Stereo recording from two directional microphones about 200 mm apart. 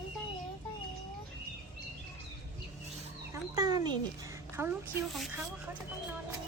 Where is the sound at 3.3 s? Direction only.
20° right (ahead or behind).